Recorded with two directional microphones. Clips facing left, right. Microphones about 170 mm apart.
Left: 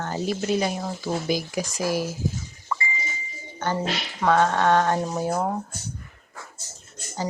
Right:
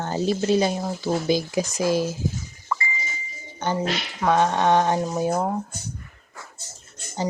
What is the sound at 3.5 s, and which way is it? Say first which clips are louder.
Music: right 1 dB; 15° right (ahead or behind).